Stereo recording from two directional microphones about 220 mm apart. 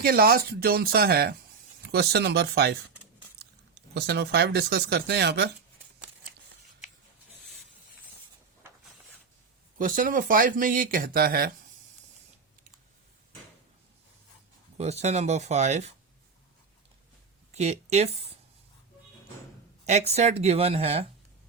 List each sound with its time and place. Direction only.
0.0 s speech: 45° right (ahead or behind)
9.7 s speech: 40° right (ahead or behind)
14.8 s speech: 30° right (ahead or behind)
17.5 s speech: 30° right (ahead or behind)
19.8 s speech: 30° right (ahead or behind)